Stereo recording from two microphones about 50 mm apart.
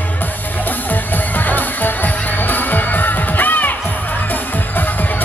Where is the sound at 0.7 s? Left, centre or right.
Left.